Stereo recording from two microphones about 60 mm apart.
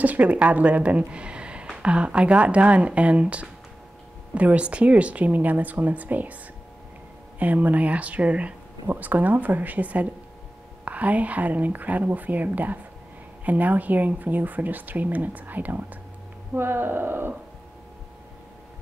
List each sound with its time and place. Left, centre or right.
0.0 s a woman's voice: right
7.3 s speech: right